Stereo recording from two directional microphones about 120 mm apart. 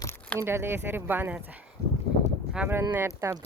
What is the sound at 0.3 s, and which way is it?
Speech, 20° right (ahead or behind).